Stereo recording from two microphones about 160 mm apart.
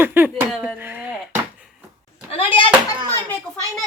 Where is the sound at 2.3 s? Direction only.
35° left (ahead or behind).